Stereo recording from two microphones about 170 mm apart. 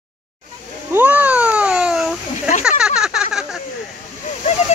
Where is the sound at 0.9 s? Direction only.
10° right (ahead or behind).